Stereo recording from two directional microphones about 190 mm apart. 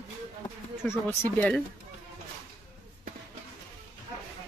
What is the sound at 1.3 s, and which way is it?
Speech, 5° left (ahead or behind).